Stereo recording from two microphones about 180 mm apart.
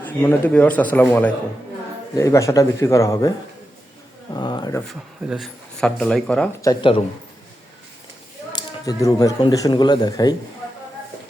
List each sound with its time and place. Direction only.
0.0 s a man's voice: 10° left (ahead or behind)
4.4 s speech: 25° left (ahead or behind)
4.9 s speech: centre (ahead or behind)
6.6 s speech: 20° left (ahead or behind)
8.5 s speech: 20° left (ahead or behind)